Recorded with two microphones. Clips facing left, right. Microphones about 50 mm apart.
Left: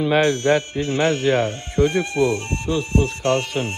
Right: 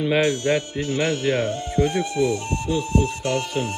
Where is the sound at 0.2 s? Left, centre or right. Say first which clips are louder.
Left 3 dB; left.